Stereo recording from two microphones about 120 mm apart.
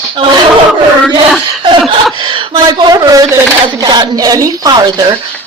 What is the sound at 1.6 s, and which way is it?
A woman's voice, 45° right (ahead or behind).